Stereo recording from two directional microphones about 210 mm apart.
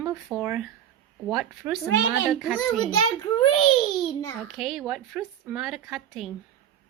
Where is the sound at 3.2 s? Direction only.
25° left (ahead or behind).